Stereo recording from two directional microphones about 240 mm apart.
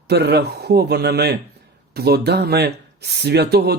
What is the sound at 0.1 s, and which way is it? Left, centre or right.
Speech, right.